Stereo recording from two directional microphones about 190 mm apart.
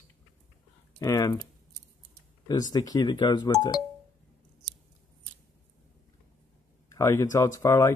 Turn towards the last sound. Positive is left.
turn(degrees=15)  # may be behind; listen again after turning